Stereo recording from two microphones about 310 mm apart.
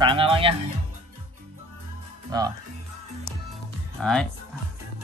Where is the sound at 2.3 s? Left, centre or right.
Centre.